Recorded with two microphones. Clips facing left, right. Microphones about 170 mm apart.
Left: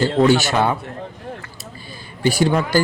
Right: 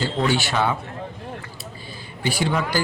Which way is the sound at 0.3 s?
45° left (ahead or behind).